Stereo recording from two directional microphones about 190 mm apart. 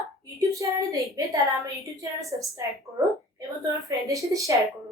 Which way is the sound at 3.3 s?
15° right (ahead or behind).